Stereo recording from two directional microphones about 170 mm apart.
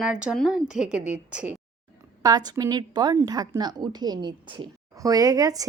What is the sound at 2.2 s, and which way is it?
A woman's voice, 20° right (ahead or behind).